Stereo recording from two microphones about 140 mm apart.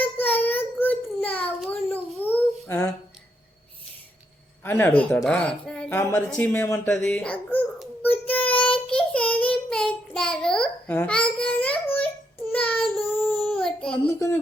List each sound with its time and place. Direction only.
0.0 s child singing: 15° left (ahead or behind)
1.9 s babbling: 15° left (ahead or behind)
4.6 s speech: 15° left (ahead or behind)
8.0 s child singing: 10° left (ahead or behind)
13.5 s child singing: 5° left (ahead or behind)
14.2 s a sound: 20° left (ahead or behind)